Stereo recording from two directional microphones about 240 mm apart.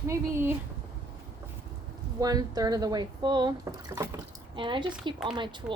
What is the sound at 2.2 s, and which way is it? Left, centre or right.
A woman's voice, centre.